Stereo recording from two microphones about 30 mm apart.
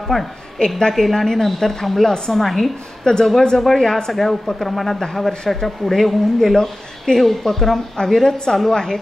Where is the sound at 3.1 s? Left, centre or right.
Left.